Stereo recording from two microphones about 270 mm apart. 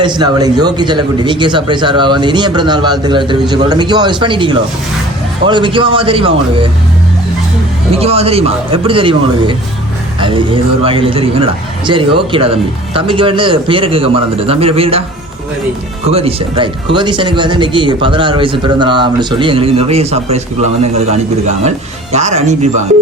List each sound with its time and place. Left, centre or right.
0.0 s speech: centre
7.9 s speech: right
16.0 s speech: right